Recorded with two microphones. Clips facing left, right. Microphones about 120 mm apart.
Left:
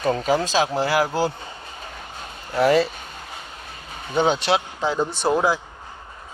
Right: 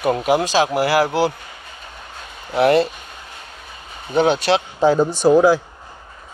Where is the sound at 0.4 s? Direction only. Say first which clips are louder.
Right 4 dB; 80° right.